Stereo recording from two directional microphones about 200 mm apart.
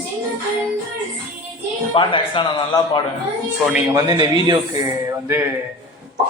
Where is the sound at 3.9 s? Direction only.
15° right (ahead or behind).